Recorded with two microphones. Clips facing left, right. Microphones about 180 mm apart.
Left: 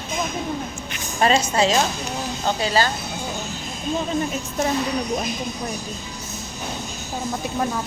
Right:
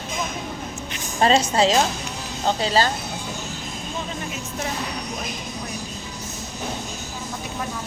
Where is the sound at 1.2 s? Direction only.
30° right (ahead or behind).